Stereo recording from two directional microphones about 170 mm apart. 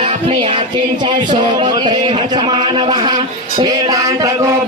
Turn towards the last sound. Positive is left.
turn(degrees=-20)  # may be behind; listen again after turning